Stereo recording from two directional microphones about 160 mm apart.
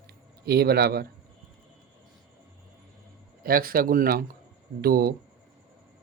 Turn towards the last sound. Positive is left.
turn(degrees=-70)  # may be behind; listen again after turning